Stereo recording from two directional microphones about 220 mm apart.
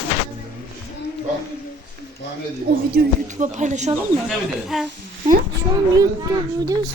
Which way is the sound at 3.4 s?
35° right (ahead or behind).